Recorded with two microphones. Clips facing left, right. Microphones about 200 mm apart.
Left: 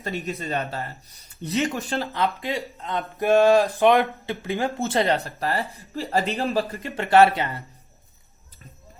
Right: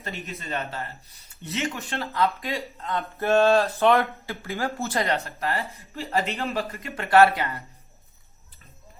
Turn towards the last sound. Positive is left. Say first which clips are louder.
# left 1 dB
turn(degrees=25)  # may be behind; listen again after turning